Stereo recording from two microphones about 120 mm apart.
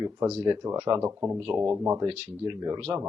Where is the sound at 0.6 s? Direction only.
35° right (ahead or behind).